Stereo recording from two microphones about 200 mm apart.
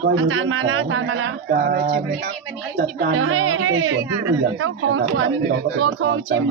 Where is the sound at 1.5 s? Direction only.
50° right (ahead or behind).